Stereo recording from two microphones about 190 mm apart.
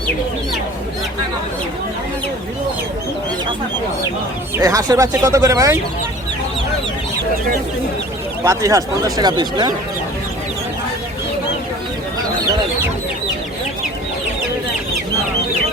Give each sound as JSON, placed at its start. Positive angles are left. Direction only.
{"t": 4.5, "sound": "speech", "side_deg": -20}
{"t": 8.4, "sound": "speech", "side_deg": -15}